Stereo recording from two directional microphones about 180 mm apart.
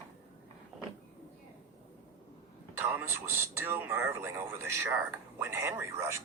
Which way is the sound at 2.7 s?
10° right (ahead or behind).